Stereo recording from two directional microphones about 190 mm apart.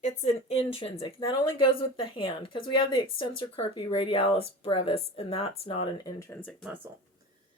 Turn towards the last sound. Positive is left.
turn(degrees=-10)  # may be behind; listen again after turning